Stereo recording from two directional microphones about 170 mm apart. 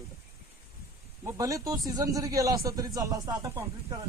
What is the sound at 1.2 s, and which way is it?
Speech, 20° right (ahead or behind).